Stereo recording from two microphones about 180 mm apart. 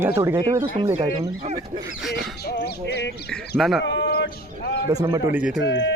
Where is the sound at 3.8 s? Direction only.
85° left; by 4.8 s 70° left (ahead or behind).